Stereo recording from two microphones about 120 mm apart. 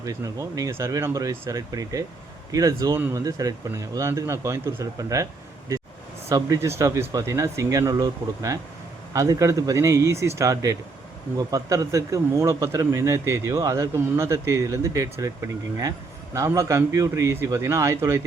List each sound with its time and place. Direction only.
0.0 s speech: 30° right (ahead or behind)